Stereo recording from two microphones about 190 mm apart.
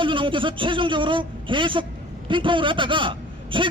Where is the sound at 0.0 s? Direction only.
25° right (ahead or behind).